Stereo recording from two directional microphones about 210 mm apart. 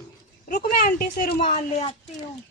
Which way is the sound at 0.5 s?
45° left (ahead or behind).